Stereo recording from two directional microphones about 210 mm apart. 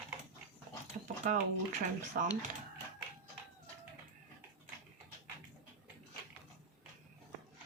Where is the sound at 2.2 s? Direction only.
45° right (ahead or behind).